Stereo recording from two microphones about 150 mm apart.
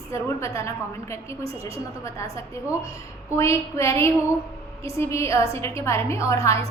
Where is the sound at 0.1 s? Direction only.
20° left (ahead or behind).